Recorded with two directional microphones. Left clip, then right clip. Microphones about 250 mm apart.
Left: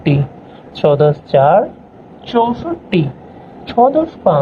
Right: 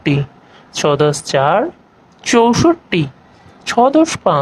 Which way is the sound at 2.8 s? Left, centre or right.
Right.